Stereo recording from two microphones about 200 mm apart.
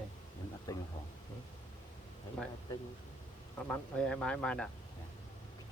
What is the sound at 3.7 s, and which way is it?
Speech, 5° left (ahead or behind).